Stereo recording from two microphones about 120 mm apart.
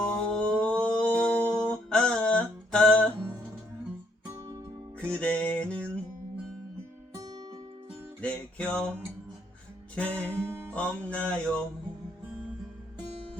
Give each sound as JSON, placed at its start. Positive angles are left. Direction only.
{"t": 0.0, "sound": "music", "side_deg": 5}
{"t": 4.9, "sound": "music", "side_deg": 10}
{"t": 8.2, "sound": "music", "side_deg": 10}
{"t": 10.2, "sound": "music", "side_deg": -20}
{"t": 10.8, "sound": "music", "side_deg": 10}